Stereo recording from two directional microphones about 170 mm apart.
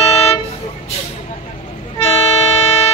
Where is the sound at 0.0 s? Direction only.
35° left (ahead or behind).